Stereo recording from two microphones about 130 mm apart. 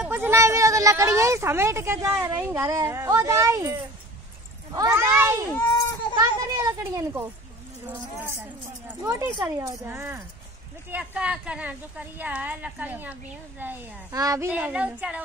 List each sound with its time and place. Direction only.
0.1 s a child's voice: 20° right (ahead or behind)
5.5 s a child's voice: 15° left (ahead or behind)
6.1 s a child's voice: 25° right (ahead or behind)
9.0 s a child's voice: 25° right (ahead or behind)
9.8 s speech: 15° right (ahead or behind)
14.1 s a child's voice: 25° right (ahead or behind)
14.5 s speech: 10° right (ahead or behind)